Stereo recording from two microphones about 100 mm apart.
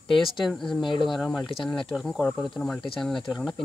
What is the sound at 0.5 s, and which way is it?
Speech, centre (ahead or behind).